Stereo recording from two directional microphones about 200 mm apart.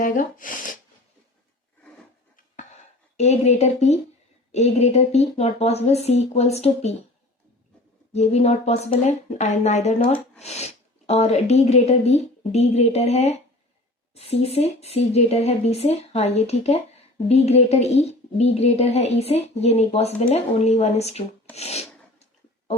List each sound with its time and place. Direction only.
0.0 s a sound: 40° left (ahead or behind)
3.2 s speech: 35° left (ahead or behind)
8.1 s speech: 35° left (ahead or behind)
21.5 s rub: 30° left (ahead or behind)